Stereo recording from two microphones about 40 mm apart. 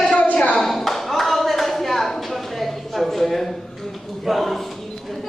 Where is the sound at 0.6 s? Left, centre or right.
Centre.